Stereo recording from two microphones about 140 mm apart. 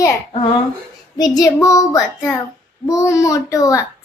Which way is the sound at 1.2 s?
25° left (ahead or behind).